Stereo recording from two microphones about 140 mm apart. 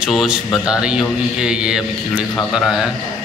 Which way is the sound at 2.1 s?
10° left (ahead or behind).